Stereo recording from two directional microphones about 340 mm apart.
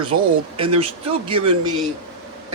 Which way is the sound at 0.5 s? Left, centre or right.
Centre.